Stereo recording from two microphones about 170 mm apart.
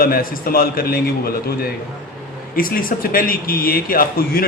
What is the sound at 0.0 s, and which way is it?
A man's voice, 60° left (ahead or behind).